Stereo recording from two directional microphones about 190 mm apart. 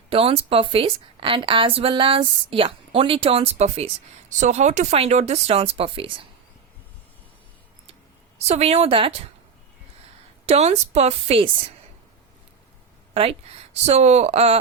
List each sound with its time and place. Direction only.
0.1 s a woman's voice: 30° right (ahead or behind)
8.4 s speech: 35° right (ahead or behind)
10.4 s speech: 35° right (ahead or behind)
13.1 s speech: 30° right (ahead or behind)